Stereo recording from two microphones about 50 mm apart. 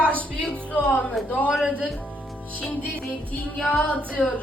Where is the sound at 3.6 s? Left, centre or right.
Left.